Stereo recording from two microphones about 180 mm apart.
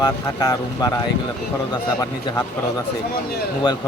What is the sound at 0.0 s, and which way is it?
Speech, 20° left (ahead or behind).